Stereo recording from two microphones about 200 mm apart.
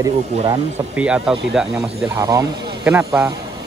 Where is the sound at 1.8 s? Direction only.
15° right (ahead or behind).